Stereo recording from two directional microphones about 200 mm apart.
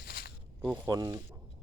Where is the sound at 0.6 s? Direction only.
5° right (ahead or behind).